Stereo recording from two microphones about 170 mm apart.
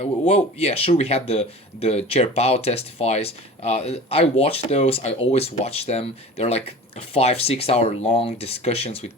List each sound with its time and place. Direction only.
0.3 s speech: 35° left (ahead or behind)